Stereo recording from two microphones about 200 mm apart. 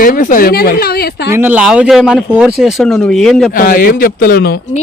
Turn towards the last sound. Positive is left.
turn(degrees=50)  # may be behind; listen again after turning